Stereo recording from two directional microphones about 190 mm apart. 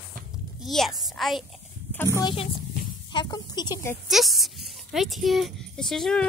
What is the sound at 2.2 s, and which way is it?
A woman's voice, 25° left (ahead or behind).